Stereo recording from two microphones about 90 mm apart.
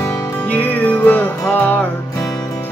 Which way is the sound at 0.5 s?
15° left (ahead or behind).